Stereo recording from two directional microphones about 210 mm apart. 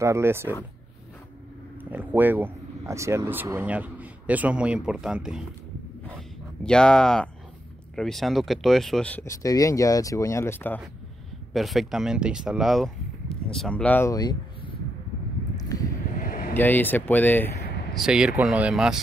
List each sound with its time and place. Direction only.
0.0 s speech: 10° right (ahead or behind)
1.9 s speech: 10° right (ahead or behind)
6.6 s speech: 5° left (ahead or behind)
11.5 s speech: centre (ahead or behind); by 14.8 s 20° left (ahead or behind)
15.5 s a sound: 15° left (ahead or behind)
16.2 s vehicle: 45° left (ahead or behind)
16.5 s speech: 10° left (ahead or behind)
17.9 s speech: 5° right (ahead or behind)